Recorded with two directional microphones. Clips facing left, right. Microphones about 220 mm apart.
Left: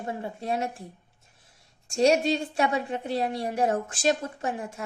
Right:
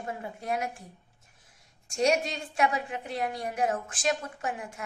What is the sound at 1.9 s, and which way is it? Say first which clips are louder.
A woman's voice: left 5 dB; 35° left (ahead or behind).